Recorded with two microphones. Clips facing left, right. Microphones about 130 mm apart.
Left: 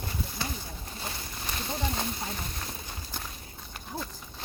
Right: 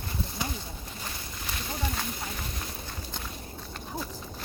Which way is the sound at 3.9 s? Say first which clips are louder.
Right 1 dB; 15° right (ahead or behind).